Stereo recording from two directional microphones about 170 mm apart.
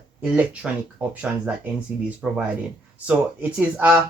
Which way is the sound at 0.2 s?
5° right (ahead or behind).